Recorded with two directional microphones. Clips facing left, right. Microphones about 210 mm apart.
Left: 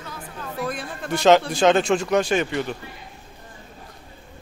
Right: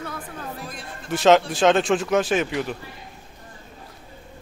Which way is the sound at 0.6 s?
65° left (ahead or behind).